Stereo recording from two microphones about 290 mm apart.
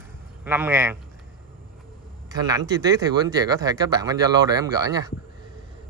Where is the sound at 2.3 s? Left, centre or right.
Centre.